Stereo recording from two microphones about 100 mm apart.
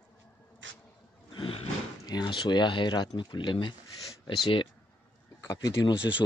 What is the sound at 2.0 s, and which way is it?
Speech, 45° left (ahead or behind).